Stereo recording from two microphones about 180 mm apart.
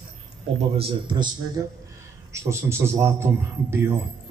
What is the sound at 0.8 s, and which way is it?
A man's voice, 30° right (ahead or behind).